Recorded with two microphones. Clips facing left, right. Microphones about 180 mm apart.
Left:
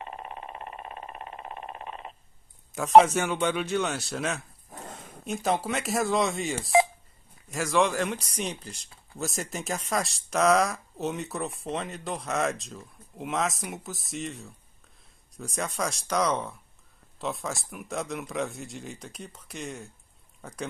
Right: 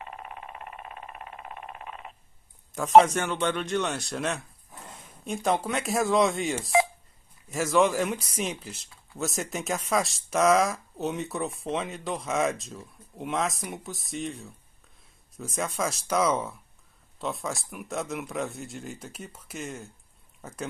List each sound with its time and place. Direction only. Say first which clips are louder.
0.0 s vehicle: left 2 dB; 30° left (ahead or behind)
2.7 s speech: even; centre (ahead or behind)